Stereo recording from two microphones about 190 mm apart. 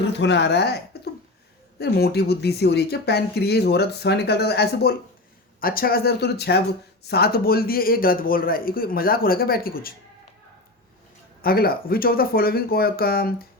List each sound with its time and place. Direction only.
0.0 s speech: 65° left (ahead or behind)
1.8 s speech: 55° left (ahead or behind)
11.4 s speech: 50° left (ahead or behind)